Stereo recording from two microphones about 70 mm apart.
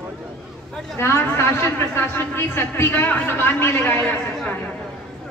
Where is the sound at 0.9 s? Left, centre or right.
Left.